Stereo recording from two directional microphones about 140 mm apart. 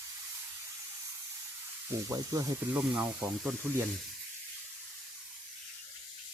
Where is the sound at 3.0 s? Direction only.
5° right (ahead or behind).